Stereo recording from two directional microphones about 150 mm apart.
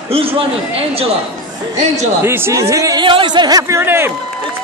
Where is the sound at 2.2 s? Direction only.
15° right (ahead or behind).